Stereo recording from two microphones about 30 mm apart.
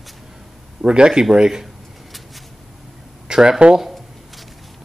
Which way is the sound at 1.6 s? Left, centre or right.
Centre.